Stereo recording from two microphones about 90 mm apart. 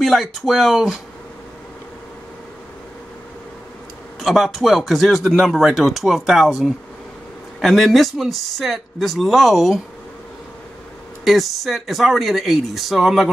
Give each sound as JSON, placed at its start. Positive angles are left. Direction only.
{"t": 0.0, "sound": "speech", "side_deg": 0}
{"t": 4.2, "sound": "speech", "side_deg": 0}
{"t": 11.2, "sound": "speech", "side_deg": 0}